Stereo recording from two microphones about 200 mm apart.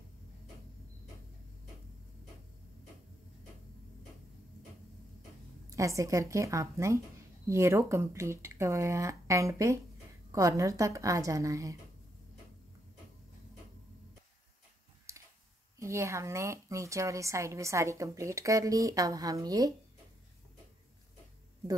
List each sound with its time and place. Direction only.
5.7 s a woman's voice: 15° right (ahead or behind)
15.1 s a sound: 15° right (ahead or behind)
15.8 s a woman's voice: 15° right (ahead or behind)